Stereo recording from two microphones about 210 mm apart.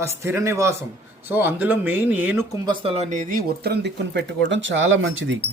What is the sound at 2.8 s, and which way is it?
Speech, 30° right (ahead or behind).